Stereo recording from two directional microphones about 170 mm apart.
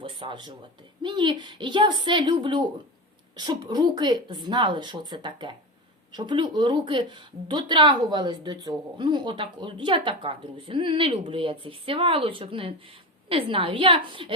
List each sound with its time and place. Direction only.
0.0 s a woman's voice: 30° right (ahead or behind)